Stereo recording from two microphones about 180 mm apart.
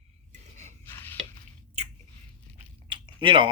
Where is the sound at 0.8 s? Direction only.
10° left (ahead or behind).